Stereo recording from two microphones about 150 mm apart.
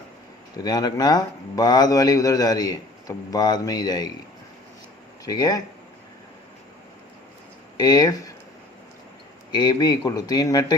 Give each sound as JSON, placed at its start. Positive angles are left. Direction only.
{"t": 0.5, "sound": "speech", "side_deg": 25}
{"t": 5.2, "sound": "speech", "side_deg": 25}
{"t": 7.8, "sound": "speech", "side_deg": 25}
{"t": 9.5, "sound": "speech", "side_deg": 30}